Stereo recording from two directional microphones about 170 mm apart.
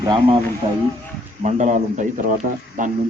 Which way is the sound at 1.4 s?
45° right (ahead or behind).